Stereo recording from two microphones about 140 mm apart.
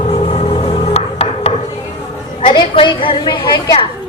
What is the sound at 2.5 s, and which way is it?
Speech, 35° left (ahead or behind).